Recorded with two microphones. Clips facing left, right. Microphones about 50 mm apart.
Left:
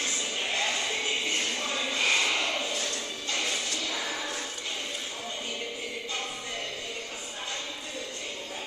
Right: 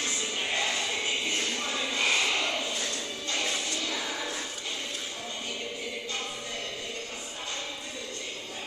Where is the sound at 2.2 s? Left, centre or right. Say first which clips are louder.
Even; centre.